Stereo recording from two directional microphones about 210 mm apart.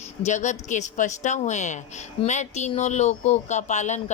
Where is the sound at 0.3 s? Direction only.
35° left (ahead or behind).